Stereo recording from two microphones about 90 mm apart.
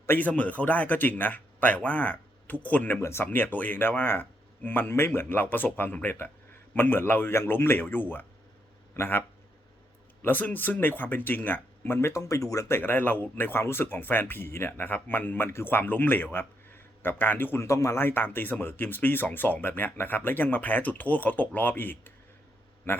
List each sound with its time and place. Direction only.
0.0 s speech: 20° left (ahead or behind)
3.0 s speech: 30° left (ahead or behind)
3.2 s speech: 20° left (ahead or behind)
10.2 s speech: 20° left (ahead or behind)